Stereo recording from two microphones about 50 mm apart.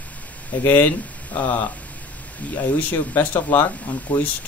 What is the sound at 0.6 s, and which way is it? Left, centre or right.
Speech, left.